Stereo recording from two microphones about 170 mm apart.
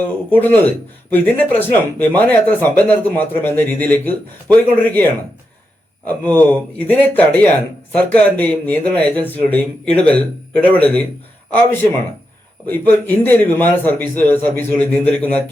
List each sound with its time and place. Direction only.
0.3 s speech: 10° left (ahead or behind)
6.1 s speech: 10° left (ahead or behind)
12.6 s speech: 10° left (ahead or behind)